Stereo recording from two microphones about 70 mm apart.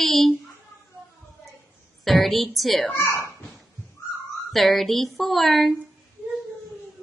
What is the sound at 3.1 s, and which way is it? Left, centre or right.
Speech, left.